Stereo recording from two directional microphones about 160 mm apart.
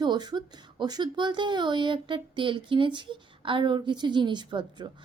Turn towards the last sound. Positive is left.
turn(degrees=-30)  # may be behind; listen again after turning